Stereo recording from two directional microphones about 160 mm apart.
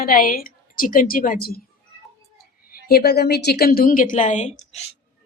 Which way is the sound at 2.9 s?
85° left.